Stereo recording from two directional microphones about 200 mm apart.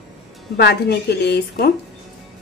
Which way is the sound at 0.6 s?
55° left (ahead or behind).